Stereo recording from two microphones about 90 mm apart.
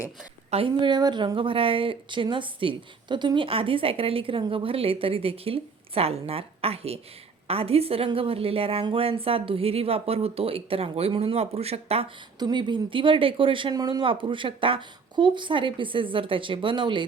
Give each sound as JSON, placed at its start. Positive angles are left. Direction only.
{"t": 0.8, "sound": "a woman's voice", "side_deg": -55}
{"t": 12.4, "sound": "speech", "side_deg": -55}